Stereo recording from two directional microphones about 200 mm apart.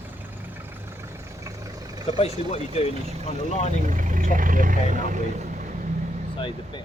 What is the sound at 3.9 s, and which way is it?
Speech, 40° right (ahead or behind).